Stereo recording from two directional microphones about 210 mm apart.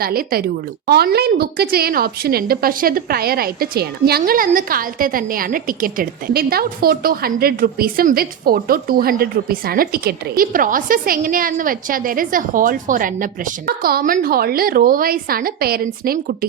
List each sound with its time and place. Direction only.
0.0 s a woman's voice: 45° right (ahead or behind)